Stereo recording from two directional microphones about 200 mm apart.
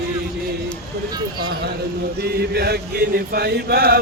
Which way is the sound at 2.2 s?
55° right (ahead or behind).